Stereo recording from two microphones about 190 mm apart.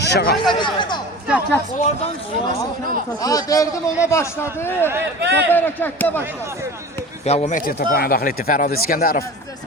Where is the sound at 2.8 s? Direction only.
45° right (ahead or behind).